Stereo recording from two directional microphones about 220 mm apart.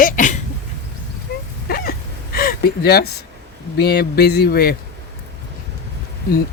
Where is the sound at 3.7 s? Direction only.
45° left (ahead or behind).